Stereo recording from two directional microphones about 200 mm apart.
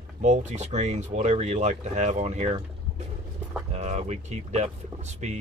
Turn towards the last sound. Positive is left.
turn(degrees=-35)  # may be behind; listen again after turning